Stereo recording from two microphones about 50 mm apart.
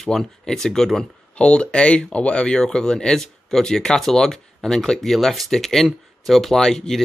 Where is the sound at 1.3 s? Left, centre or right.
Left.